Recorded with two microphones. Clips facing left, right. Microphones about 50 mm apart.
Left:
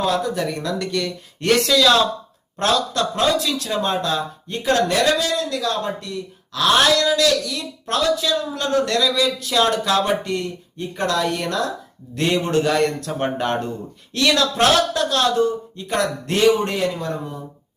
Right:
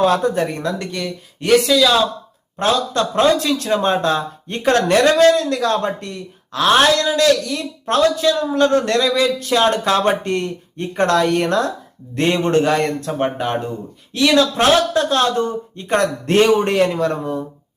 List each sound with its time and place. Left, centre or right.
0.0 s speech: right
1.0 s speech: centre
2.9 s speech: right
12.7 s speech: centre
15.1 s speech: right
16.7 s a man's voice: right